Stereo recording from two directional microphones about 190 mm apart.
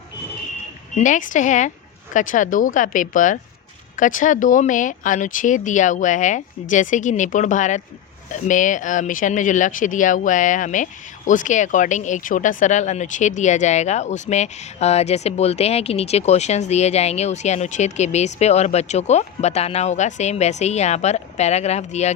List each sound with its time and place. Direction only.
0.9 s speech: 40° left (ahead or behind)